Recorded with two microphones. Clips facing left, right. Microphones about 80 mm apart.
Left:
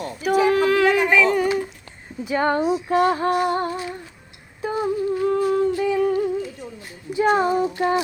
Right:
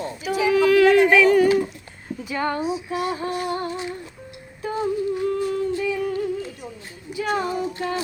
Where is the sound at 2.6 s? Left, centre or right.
Left.